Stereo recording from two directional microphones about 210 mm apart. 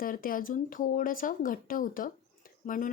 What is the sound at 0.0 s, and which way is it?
A woman's voice, 40° left (ahead or behind).